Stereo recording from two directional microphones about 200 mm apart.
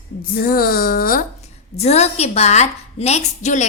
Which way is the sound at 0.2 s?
50° left (ahead or behind).